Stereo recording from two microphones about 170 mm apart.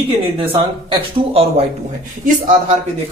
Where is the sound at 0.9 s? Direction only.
35° right (ahead or behind).